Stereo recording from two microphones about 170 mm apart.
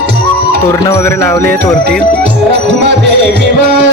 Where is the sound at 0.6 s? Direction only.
15° left (ahead or behind).